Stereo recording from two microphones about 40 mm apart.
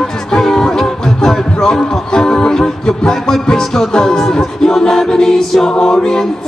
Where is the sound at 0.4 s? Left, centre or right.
Centre.